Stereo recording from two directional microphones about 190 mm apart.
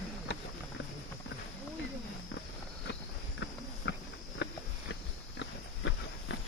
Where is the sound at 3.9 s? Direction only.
65° left (ahead or behind).